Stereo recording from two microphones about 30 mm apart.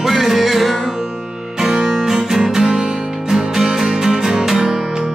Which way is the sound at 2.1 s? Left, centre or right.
Centre.